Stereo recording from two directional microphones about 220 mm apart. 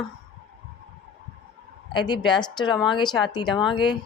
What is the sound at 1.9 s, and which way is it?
Speech, 20° left (ahead or behind).